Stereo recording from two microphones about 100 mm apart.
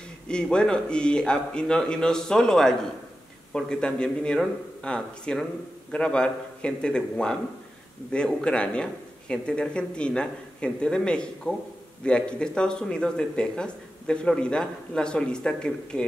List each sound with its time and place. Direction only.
0.3 s speech: 10° left (ahead or behind)